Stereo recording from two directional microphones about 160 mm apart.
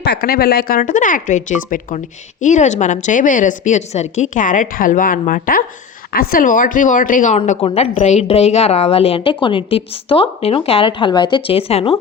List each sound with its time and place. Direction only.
0.0 s a woman's voice: 85° left; by 7.3 s 55° left (ahead or behind)
7.3 s a woman's voice: 45° left (ahead or behind)